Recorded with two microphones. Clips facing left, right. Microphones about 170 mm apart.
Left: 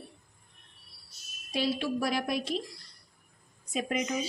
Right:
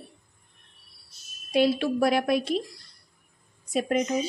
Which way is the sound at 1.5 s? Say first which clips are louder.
Right 7 dB; 60° right (ahead or behind).